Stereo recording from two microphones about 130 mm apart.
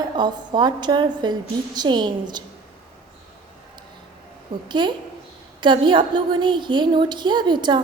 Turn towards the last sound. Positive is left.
turn(degrees=-35)  # may be behind; listen again after turning